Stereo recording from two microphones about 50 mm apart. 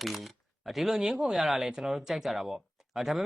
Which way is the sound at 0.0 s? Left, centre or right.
Centre.